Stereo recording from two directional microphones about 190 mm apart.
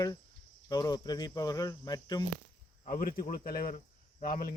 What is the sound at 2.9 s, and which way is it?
Speech, 50° left (ahead or behind).